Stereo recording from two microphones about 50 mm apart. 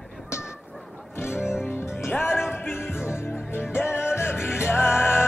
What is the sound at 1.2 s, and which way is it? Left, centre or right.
Music, left.